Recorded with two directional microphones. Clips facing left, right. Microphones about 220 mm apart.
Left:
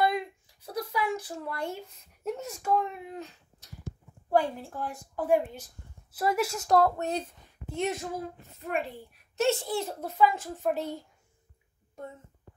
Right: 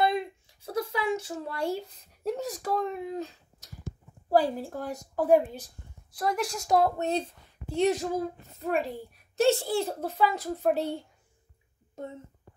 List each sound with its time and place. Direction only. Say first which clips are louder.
0.0 s a sound: right 1 dB; 25° right (ahead or behind)
4.3 s a child's voice: right 2 dB; 35° right (ahead or behind)
6.1 s a woman's voice: left 2 dB; 5° left (ahead or behind)
7.0 s a woman's voice: right 3 dB; 25° right (ahead or behind)